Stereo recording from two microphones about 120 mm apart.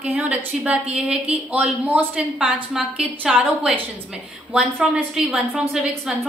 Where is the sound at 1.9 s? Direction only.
10° right (ahead or behind).